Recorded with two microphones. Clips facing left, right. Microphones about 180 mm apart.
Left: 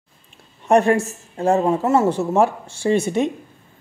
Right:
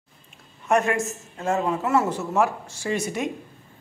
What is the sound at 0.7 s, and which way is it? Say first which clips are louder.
A woman's voice: left 6 dB; 35° left (ahead or behind).